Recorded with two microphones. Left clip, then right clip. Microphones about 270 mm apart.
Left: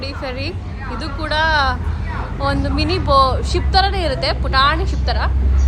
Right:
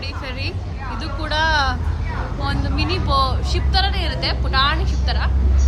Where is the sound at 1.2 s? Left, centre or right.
Centre.